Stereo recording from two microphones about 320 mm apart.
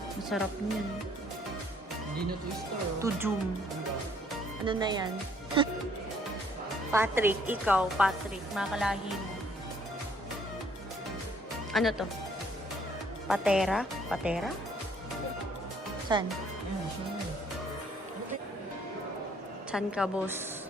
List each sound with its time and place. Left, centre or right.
0.3 s speech: centre
3.0 s speech: centre
4.6 s speech: centre
6.9 s speech: centre
11.7 s speech: centre
13.2 s speech: centre
16.1 s speech: centre
19.7 s speech: centre